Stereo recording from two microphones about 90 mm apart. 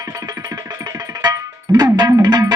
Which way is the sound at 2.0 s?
45° right (ahead or behind).